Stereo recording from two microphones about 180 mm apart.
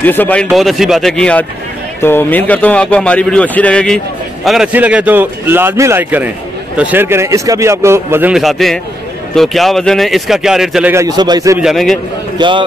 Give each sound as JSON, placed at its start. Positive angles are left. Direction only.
{"t": 0.0, "sound": "a man's voice", "side_deg": 10}
{"t": 4.5, "sound": "speech", "side_deg": -5}
{"t": 11.6, "sound": "speech", "side_deg": 0}
{"t": 12.4, "sound": "a man's voice", "side_deg": -25}